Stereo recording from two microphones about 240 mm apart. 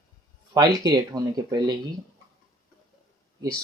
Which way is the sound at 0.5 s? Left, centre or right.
Centre.